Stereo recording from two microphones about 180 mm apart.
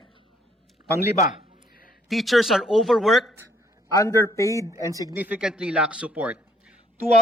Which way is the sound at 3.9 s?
20° left (ahead or behind).